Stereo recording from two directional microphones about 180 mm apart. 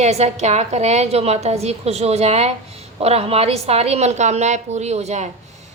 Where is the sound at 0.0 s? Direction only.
40° right (ahead or behind).